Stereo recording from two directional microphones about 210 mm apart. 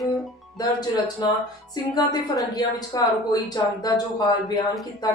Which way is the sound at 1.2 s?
20° left (ahead or behind).